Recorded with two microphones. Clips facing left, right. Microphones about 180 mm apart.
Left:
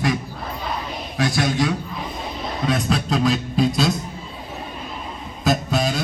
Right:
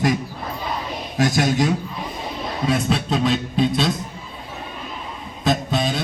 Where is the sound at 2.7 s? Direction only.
Centre (ahead or behind).